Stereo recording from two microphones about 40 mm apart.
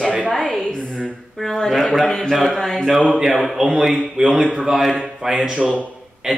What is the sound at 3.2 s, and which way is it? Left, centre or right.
Speech, centre.